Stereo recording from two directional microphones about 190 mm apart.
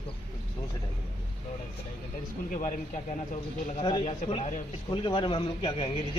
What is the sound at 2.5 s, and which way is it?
Speech, 45° left (ahead or behind).